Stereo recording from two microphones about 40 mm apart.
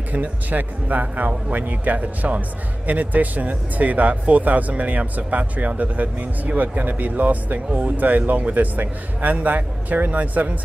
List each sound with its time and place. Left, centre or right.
0.1 s speech: right